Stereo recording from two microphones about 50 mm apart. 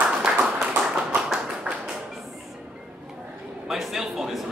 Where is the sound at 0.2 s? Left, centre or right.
Centre.